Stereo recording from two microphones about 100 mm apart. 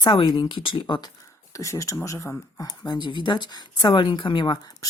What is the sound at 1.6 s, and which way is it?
Speech, 30° left (ahead or behind).